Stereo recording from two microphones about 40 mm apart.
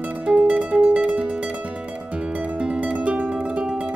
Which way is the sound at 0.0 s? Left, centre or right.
Right.